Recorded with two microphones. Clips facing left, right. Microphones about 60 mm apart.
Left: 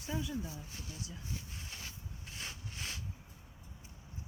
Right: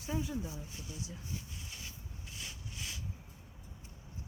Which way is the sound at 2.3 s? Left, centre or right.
Left.